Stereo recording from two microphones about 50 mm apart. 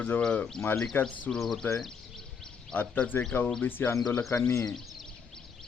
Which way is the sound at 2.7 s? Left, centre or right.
Left.